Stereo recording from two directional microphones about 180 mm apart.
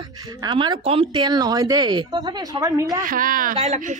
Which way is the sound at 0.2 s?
20° right (ahead or behind).